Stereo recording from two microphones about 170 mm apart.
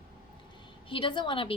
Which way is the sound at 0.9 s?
30° left (ahead or behind).